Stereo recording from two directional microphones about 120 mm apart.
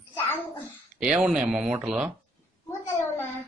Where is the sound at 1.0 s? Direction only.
5° right (ahead or behind).